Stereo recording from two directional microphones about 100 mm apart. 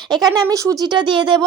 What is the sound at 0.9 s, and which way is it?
Speech, 50° right (ahead or behind).